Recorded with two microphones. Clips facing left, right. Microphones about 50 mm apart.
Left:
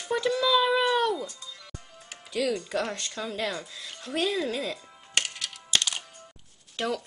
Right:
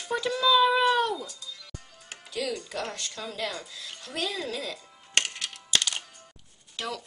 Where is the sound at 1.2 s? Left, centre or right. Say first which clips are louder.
Left 2 dB; left.